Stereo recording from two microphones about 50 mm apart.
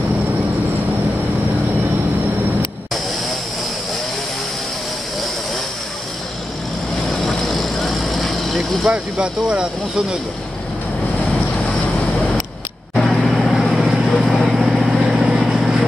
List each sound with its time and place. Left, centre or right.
7.1 s vehicle: centre
8.9 s speech: centre
13.0 s vehicle: centre